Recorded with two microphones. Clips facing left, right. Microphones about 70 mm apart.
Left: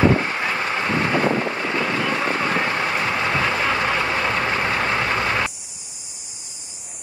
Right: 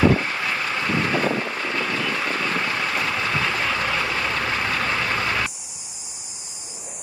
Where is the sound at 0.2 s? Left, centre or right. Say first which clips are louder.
Left 2 dB; left.